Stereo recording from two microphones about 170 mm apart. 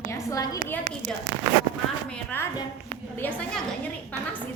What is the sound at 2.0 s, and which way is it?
A woman's voice, 10° left (ahead or behind).